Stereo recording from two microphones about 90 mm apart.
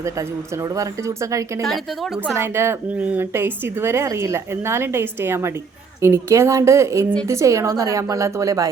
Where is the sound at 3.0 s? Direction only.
15° right (ahead or behind).